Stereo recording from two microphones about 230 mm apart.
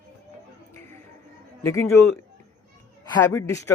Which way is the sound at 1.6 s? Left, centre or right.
Centre.